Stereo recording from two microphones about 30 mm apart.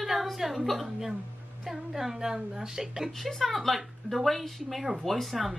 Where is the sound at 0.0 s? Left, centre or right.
Centre.